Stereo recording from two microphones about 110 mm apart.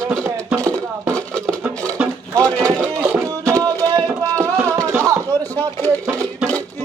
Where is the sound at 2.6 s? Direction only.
20° right (ahead or behind).